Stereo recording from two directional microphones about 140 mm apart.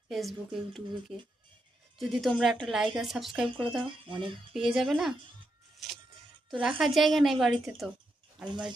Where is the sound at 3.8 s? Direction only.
35° right (ahead or behind).